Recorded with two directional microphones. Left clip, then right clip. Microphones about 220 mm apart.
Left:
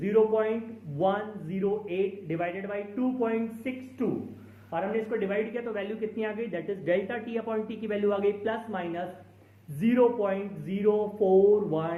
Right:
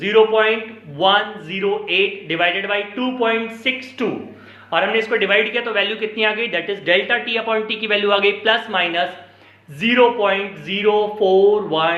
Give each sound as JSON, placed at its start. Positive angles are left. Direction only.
{"t": 0.0, "sound": "a man's voice", "side_deg": -5}
{"t": 10.2, "sound": "a man's voice", "side_deg": -10}